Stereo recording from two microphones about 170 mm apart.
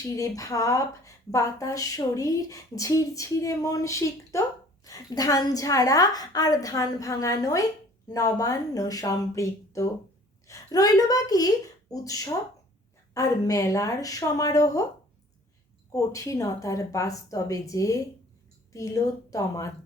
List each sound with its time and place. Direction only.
0.2 s a woman's voice: 20° left (ahead or behind)
15.9 s speech: 20° left (ahead or behind)